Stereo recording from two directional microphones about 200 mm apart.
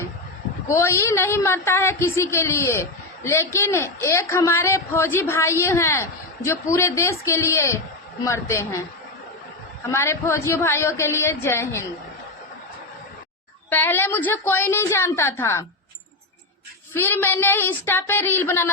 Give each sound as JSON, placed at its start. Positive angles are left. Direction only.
{"t": 0.7, "sound": "speech", "side_deg": 15}
{"t": 9.9, "sound": "speech", "side_deg": 15}
{"t": 13.7, "sound": "speech", "side_deg": 10}
{"t": 16.9, "sound": "speech", "side_deg": 10}